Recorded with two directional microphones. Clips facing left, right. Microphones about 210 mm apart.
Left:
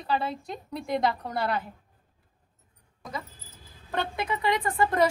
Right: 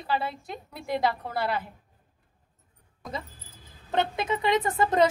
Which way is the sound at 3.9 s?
20° right (ahead or behind).